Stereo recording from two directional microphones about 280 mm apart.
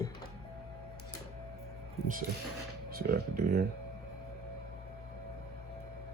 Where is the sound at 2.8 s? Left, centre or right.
Right.